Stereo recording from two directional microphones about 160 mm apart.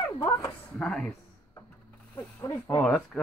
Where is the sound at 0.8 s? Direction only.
Centre (ahead or behind).